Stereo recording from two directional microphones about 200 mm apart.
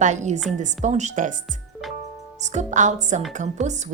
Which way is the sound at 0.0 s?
35° right (ahead or behind).